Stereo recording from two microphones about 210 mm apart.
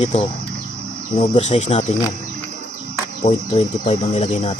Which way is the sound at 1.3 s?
30° left (ahead or behind).